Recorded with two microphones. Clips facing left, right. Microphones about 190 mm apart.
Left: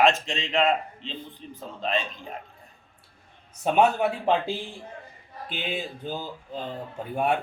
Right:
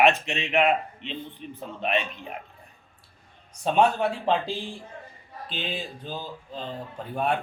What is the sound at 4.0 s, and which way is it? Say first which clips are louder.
Speech: left 1 dB; 20° left (ahead or behind).